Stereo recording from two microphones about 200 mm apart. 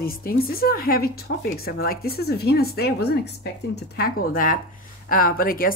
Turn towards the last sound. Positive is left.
turn(degrees=45)  # may be behind; listen again after turning